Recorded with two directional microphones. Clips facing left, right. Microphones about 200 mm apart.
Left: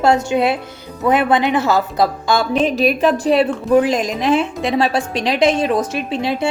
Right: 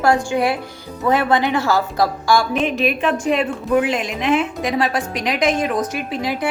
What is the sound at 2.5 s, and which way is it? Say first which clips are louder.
A woman's voice: left 3 dB; 35° left (ahead or behind).